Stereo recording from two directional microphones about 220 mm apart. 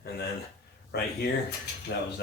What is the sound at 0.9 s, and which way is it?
Speech, 50° left (ahead or behind).